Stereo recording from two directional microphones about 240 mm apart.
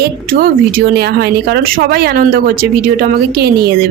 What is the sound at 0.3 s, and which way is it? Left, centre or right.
A woman's voice, right.